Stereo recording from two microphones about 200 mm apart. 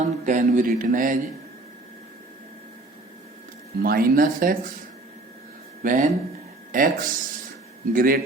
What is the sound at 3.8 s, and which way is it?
Speech, 50° right (ahead or behind).